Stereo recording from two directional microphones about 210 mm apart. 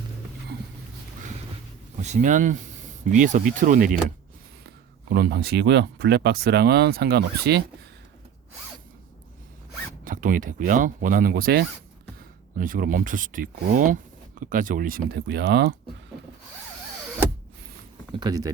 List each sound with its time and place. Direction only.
2.0 s speech: 35° right (ahead or behind)
10.0 s speech: 40° right (ahead or behind)
18.1 s speech: 20° right (ahead or behind)